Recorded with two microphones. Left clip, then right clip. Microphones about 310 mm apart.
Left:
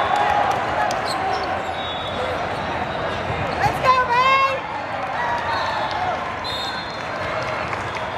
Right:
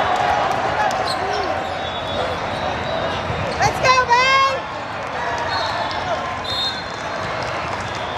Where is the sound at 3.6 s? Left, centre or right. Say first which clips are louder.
Right 2 dB; right.